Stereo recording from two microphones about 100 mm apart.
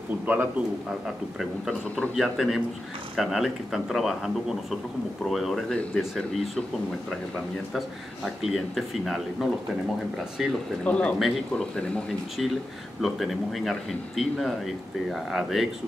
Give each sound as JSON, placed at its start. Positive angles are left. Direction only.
{"t": 0.3, "sound": "a man's voice", "side_deg": -15}
{"t": 1.0, "sound": "speech", "side_deg": 0}
{"t": 10.8, "sound": "speech", "side_deg": 10}
{"t": 11.1, "sound": "speech", "side_deg": 0}
{"t": 13.0, "sound": "speech", "side_deg": 0}